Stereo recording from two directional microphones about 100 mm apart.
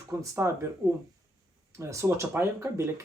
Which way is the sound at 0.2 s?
30° right (ahead or behind).